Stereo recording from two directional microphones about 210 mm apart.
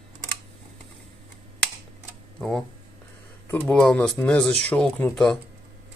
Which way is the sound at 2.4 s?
5° left (ahead or behind).